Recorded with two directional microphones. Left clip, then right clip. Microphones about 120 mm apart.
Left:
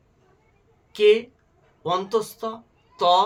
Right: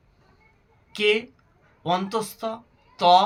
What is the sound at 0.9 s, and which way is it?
Speech, 25° left (ahead or behind).